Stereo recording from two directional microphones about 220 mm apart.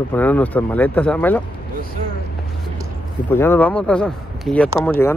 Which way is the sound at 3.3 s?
10° left (ahead or behind).